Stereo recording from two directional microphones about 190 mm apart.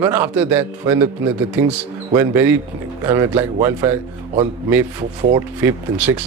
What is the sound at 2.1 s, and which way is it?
A man's voice, 10° right (ahead or behind).